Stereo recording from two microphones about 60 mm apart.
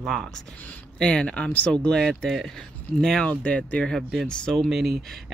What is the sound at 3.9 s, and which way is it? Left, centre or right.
Speech, centre.